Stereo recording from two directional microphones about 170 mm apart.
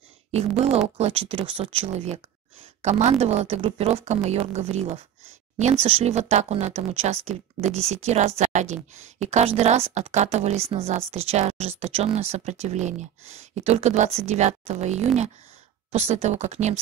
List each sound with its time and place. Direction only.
0.3 s speech: 40° right (ahead or behind)